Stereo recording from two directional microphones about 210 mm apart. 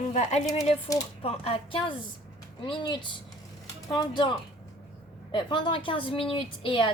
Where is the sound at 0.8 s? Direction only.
20° left (ahead or behind).